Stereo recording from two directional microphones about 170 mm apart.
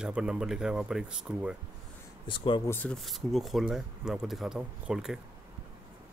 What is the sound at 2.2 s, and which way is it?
Speech, 30° left (ahead or behind).